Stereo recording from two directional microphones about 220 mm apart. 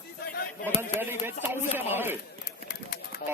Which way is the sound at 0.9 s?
10° right (ahead or behind).